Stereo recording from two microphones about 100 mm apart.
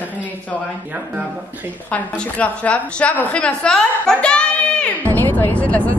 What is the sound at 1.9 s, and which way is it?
A woman's voice, 10° left (ahead or behind).